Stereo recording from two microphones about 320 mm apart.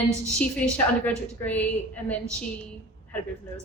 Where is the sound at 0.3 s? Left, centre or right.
Centre.